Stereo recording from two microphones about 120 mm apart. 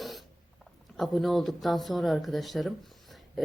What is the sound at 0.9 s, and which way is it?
Speech, centre (ahead or behind).